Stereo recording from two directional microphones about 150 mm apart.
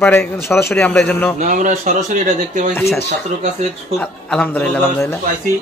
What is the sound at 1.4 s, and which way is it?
Speech, 55° right (ahead or behind).